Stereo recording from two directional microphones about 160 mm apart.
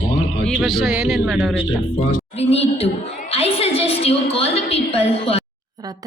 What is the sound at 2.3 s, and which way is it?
A woman's voice, 40° left (ahead or behind).